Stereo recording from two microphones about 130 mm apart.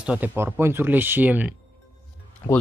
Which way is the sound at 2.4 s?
15° left (ahead or behind).